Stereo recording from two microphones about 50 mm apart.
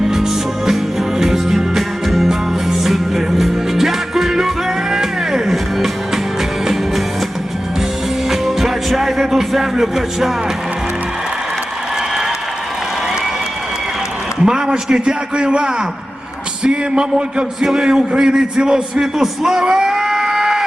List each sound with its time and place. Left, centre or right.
0.1 s music: centre
8.3 s music: centre
14.4 s a man's voice: centre